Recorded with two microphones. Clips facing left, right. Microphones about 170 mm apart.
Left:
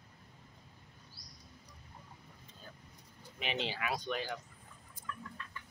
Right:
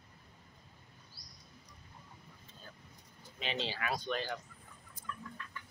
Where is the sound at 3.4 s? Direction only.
15° left (ahead or behind).